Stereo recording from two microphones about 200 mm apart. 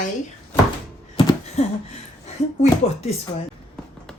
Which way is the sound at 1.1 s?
25° left (ahead or behind).